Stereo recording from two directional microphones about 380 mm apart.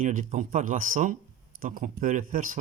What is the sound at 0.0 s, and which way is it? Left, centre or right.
Speech, centre.